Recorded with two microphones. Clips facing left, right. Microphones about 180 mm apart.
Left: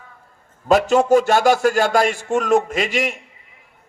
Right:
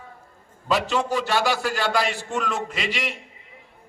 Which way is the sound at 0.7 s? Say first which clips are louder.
Left 9 dB; 45° left (ahead or behind).